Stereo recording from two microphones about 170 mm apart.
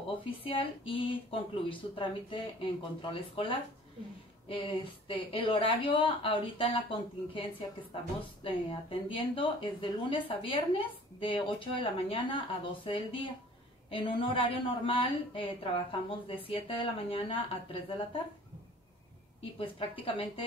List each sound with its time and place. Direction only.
0.2 s speech: 30° left (ahead or behind)
8.5 s speech: 30° left (ahead or behind)
19.6 s speech: 30° left (ahead or behind)